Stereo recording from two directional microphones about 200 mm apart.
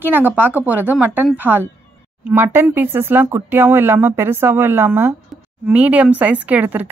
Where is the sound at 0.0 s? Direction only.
10° right (ahead or behind).